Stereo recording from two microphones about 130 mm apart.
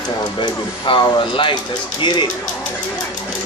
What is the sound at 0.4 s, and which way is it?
Speech, 40° left (ahead or behind).